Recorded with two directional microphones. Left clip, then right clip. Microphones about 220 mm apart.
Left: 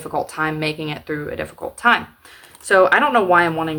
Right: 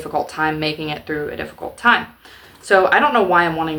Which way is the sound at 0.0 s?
15° left (ahead or behind).